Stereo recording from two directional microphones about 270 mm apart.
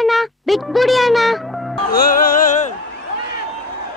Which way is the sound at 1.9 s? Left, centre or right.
Left.